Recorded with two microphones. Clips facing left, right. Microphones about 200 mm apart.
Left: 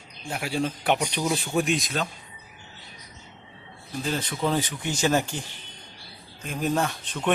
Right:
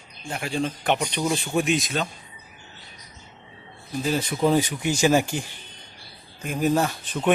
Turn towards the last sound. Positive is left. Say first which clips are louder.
# right 3 dB
turn(degrees=-5)  # may be behind; listen again after turning